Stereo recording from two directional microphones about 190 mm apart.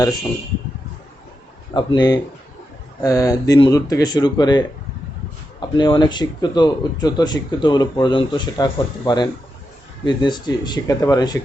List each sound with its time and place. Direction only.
1.7 s speech: 25° left (ahead or behind)